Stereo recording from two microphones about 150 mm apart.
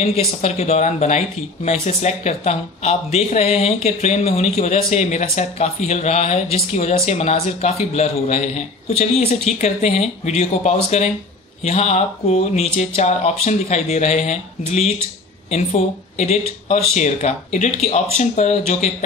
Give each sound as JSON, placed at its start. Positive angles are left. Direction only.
{"t": 0.0, "sound": "speech", "side_deg": 45}